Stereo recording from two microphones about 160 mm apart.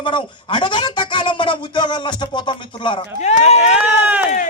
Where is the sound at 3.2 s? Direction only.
45° left (ahead or behind).